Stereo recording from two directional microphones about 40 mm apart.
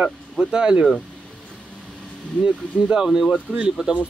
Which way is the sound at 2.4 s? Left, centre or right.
Right.